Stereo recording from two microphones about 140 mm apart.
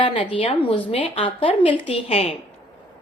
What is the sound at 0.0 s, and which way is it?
A woman's voice, 35° left (ahead or behind).